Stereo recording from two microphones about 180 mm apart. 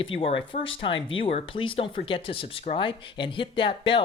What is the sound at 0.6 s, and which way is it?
Speech, 90° left.